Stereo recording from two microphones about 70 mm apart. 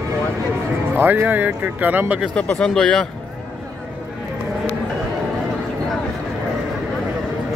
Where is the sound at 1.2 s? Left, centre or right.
Right.